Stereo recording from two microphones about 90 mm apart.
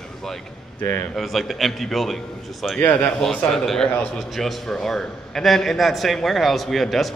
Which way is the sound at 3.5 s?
5° left (ahead or behind).